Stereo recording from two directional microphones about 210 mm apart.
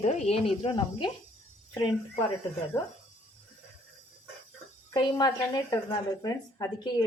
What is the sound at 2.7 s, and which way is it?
Speech, 10° left (ahead or behind).